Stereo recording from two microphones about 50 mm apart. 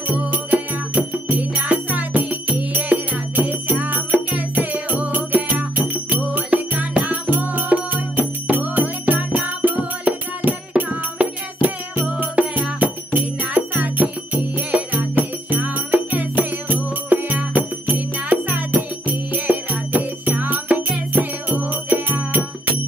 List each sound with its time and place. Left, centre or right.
0.1 s music: right